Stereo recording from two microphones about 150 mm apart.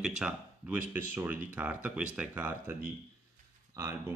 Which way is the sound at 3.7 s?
15° right (ahead or behind).